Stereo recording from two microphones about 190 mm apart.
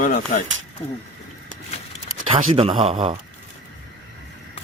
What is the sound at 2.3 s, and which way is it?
Speech, 30° right (ahead or behind).